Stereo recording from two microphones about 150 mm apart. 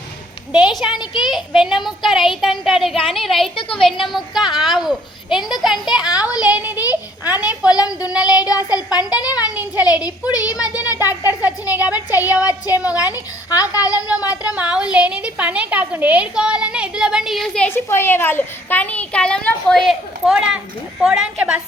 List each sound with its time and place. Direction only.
0.5 s a woman's voice: centre (ahead or behind)
3.5 s a woman's voice: 35° left (ahead or behind)
4.0 s a woman's voice: centre (ahead or behind)
6.1 s speech: 25° left (ahead or behind)
6.4 s a child's voice: 10° right (ahead or behind)
8.2 s speech: 25° left (ahead or behind)
11.1 s a child's voice: 10° right (ahead or behind)
12.5 s speech: 25° left (ahead or behind)
14.4 s a woman's voice: 10° right (ahead or behind)